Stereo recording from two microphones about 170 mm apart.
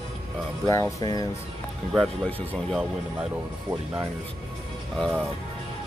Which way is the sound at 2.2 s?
5° left (ahead or behind).